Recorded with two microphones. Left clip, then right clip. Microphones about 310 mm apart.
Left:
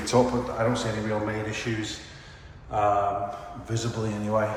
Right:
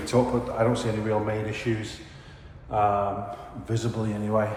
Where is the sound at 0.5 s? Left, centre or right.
Centre.